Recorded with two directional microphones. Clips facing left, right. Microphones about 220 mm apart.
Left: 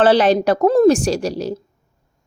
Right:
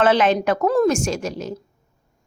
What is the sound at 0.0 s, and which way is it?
A woman's voice, 35° left (ahead or behind).